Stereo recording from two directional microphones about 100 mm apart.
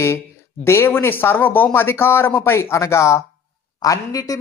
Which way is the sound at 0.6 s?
25° left (ahead or behind).